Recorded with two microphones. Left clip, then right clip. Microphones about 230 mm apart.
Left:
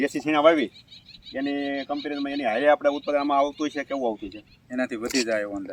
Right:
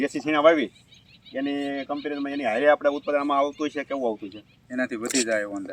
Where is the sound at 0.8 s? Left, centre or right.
Left.